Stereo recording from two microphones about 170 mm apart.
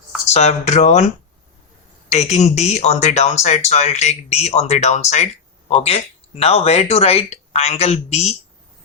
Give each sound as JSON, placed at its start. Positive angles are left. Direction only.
{"t": 0.3, "sound": "speech", "side_deg": 40}